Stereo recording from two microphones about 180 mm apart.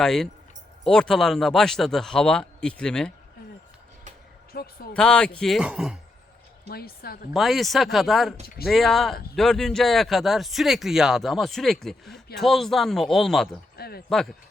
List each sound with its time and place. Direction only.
0.0 s speech: centre (ahead or behind)
4.5 s a woman's voice: 55° left (ahead or behind)
4.9 s speech: 5° left (ahead or behind)
6.7 s a woman's voice: 60° left (ahead or behind)
7.3 s speech: centre (ahead or behind)
13.7 s a sound: 60° left (ahead or behind)
14.1 s speech: centre (ahead or behind)